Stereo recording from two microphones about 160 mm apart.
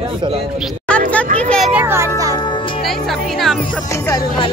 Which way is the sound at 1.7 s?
15° right (ahead or behind).